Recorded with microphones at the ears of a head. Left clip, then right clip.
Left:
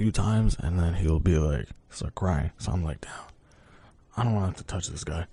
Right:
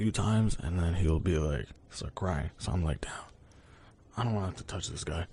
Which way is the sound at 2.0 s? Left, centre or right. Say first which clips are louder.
Left 4 dB; left.